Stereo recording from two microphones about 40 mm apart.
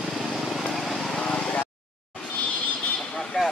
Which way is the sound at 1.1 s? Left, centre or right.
Left.